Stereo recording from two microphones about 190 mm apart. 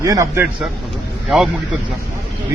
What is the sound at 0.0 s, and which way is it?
Speech, 15° right (ahead or behind).